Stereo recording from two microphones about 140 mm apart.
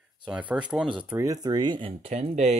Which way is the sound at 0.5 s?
10° right (ahead or behind).